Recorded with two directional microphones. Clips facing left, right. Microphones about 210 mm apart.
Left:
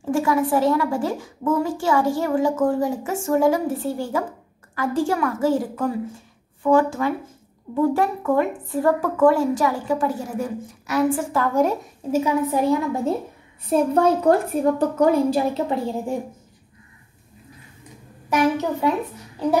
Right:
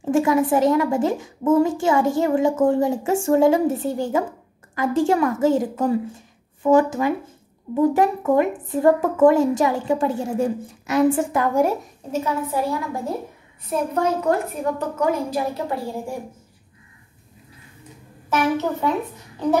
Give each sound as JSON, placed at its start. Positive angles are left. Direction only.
{"t": 0.1, "sound": "a woman's voice", "side_deg": -20}
{"t": 12.1, "sound": "a woman's voice", "side_deg": 15}
{"t": 13.7, "sound": "a woman's voice", "side_deg": 30}
{"t": 18.3, "sound": "a woman's voice", "side_deg": 10}